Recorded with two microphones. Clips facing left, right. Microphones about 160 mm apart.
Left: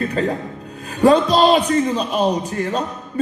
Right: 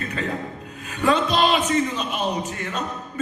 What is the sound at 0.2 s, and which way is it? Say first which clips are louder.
Speech: left 7 dB; 40° left (ahead or behind).